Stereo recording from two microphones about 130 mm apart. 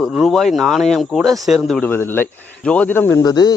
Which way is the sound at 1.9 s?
15° left (ahead or behind).